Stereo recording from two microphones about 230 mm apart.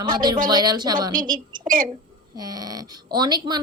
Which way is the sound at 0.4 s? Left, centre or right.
Centre.